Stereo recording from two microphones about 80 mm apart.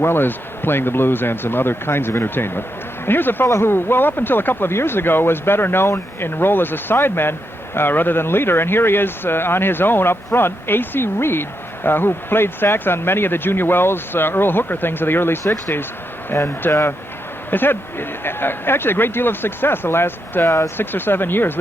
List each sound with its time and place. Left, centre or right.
0.0 s speech: left